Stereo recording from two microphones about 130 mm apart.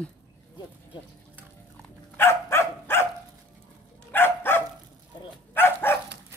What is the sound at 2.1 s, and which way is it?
Dog, 20° left (ahead or behind).